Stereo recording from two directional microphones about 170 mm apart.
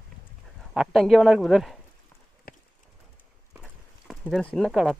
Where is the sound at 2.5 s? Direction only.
60° left (ahead or behind).